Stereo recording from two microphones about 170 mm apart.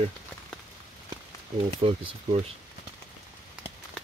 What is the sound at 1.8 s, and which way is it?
Speech, 35° right (ahead or behind).